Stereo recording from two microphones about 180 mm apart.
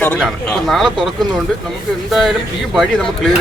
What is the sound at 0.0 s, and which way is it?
Speech, 5° left (ahead or behind).